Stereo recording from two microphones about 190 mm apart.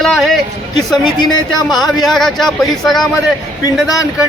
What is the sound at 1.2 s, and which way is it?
Speech, 20° left (ahead or behind).